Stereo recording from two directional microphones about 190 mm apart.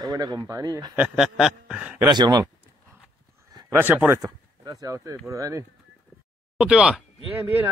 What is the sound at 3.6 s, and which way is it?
Speech, 10° right (ahead or behind).